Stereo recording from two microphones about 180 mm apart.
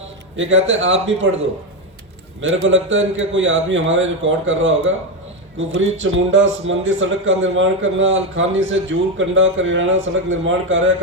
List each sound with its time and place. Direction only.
0.3 s a man's voice: 90° right
2.6 s a man's voice: 90° right